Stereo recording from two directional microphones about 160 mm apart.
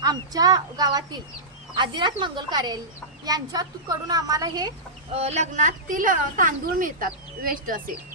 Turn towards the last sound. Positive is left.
turn(degrees=-60)  # may be behind; listen again after turning